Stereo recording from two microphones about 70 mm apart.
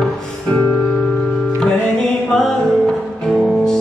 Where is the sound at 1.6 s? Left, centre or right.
Centre.